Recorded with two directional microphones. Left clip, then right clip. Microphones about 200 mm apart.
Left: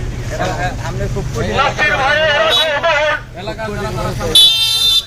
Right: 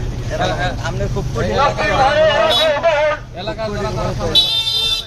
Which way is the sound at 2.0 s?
20° right (ahead or behind).